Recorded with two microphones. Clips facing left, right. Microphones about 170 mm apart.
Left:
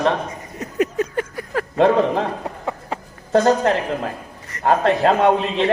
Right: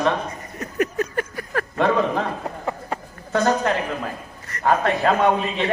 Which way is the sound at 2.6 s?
5° left (ahead or behind).